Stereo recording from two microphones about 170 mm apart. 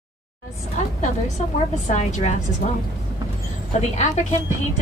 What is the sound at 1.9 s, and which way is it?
Speech, 45° left (ahead or behind).